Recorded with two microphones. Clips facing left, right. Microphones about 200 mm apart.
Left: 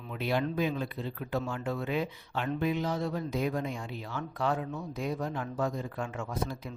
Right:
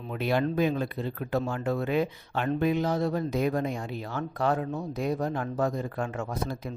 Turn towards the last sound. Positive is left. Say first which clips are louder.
# right 3 dB
turn(degrees=-40)  # may be behind; listen again after turning